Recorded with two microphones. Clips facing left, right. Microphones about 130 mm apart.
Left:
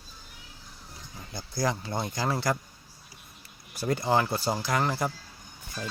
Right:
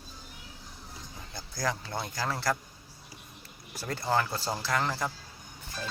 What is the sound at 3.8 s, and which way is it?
Speech, 15° left (ahead or behind).